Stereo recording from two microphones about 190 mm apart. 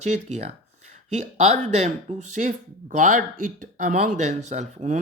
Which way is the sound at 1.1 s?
35° right (ahead or behind).